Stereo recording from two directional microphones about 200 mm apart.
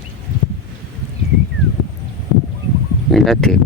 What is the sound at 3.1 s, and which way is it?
Speech, centre (ahead or behind).